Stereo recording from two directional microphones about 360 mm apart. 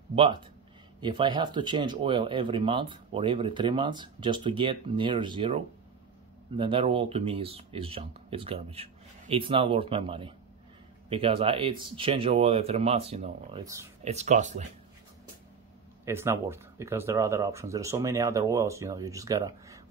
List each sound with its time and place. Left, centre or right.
0.1 s speech: centre
16.1 s speech: centre